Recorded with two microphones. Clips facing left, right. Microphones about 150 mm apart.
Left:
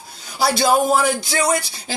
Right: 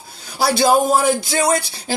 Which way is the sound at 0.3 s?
55° right (ahead or behind).